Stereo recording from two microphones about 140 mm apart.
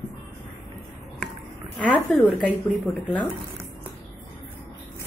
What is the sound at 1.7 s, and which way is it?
Speech, 10° left (ahead or behind).